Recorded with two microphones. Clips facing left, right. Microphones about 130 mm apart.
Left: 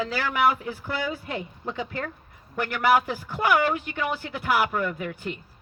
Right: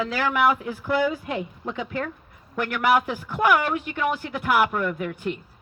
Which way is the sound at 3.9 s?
Centre (ahead or behind).